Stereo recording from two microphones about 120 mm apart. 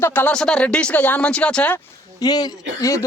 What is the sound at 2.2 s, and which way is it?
Speech, 35° left (ahead or behind).